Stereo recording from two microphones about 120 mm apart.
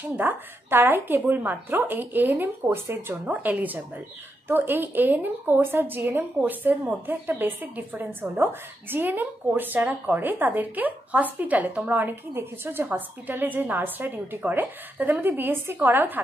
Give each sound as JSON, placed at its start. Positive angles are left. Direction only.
{"t": 0.2, "sound": "a woman's voice", "side_deg": -15}